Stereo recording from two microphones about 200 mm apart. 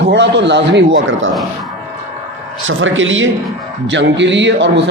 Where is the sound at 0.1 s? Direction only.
60° right (ahead or behind).